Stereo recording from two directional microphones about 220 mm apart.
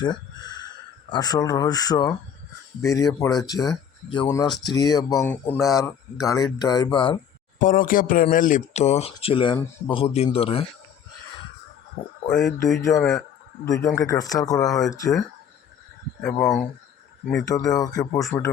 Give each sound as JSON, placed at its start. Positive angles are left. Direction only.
{"t": 0.0, "sound": "speech", "side_deg": 20}
{"t": 6.2, "sound": "speech", "side_deg": 15}
{"t": 7.6, "sound": "speech", "side_deg": 40}
{"t": 12.0, "sound": "speech", "side_deg": 15}
{"t": 12.3, "sound": "speech", "side_deg": 0}
{"t": 13.8, "sound": "speech", "side_deg": 15}
{"t": 14.6, "sound": "speech", "side_deg": 0}
{"t": 14.8, "sound": "speech", "side_deg": 15}
{"t": 16.2, "sound": "speech", "side_deg": 5}
{"t": 17.8, "sound": "speech", "side_deg": 15}